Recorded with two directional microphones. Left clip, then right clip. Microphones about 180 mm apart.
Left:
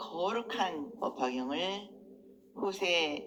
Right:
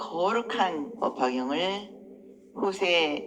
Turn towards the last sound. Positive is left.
turn(degrees=-35)  # may be behind; listen again after turning